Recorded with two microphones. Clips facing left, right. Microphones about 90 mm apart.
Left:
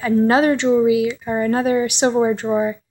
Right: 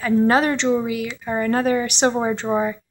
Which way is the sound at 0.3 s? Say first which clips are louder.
Left 3 dB; 15° left (ahead or behind).